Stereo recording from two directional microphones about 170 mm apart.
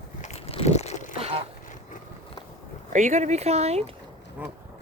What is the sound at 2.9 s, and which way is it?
Speech, 45° right (ahead or behind).